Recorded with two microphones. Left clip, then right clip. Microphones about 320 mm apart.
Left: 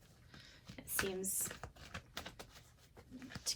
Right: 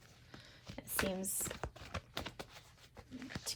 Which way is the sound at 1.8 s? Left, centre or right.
Right.